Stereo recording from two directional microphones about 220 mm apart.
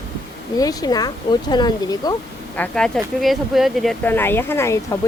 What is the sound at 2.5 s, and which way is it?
Speech, 5° left (ahead or behind).